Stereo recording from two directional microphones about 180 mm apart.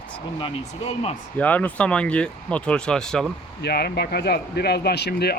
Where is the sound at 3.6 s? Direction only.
65° left (ahead or behind).